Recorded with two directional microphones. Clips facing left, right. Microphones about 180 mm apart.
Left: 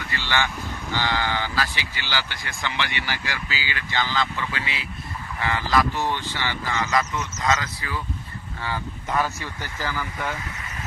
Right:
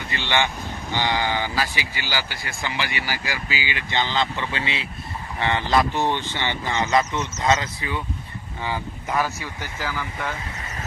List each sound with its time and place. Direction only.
0.1 s speech: 20° right (ahead or behind)
8.6 s speech: 10° right (ahead or behind)